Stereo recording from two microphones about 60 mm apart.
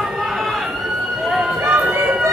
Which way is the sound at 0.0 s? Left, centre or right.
Centre.